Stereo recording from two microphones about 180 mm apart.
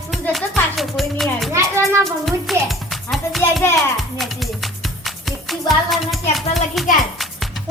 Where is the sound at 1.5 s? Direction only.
15° right (ahead or behind).